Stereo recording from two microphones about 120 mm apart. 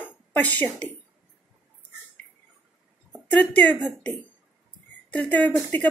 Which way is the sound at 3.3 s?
15° left (ahead or behind).